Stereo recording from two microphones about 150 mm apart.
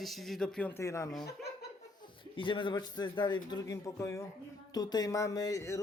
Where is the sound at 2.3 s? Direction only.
35° left (ahead or behind).